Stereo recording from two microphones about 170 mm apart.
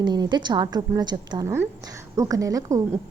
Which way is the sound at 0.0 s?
25° right (ahead or behind).